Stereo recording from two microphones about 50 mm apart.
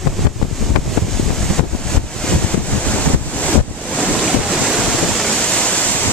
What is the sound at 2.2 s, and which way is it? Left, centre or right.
Wind noise, centre.